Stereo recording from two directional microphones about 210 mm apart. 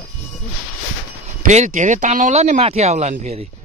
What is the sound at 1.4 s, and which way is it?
Speech, 35° right (ahead or behind).